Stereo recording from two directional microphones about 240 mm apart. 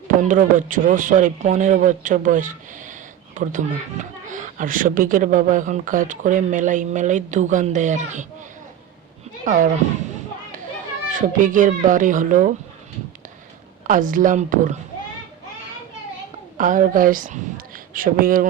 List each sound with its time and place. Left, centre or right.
0.2 s speech: right
9.4 s speech: right
11.1 s speech: right
13.8 s speech: right
16.6 s speech: right